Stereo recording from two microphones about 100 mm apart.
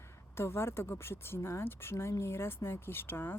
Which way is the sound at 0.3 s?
25° left (ahead or behind).